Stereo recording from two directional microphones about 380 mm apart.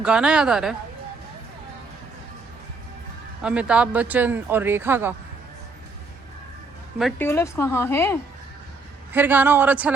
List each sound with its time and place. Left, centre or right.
0.0 s speech: centre
3.4 s speech: centre
7.0 s a woman's voice: centre
9.1 s speech: centre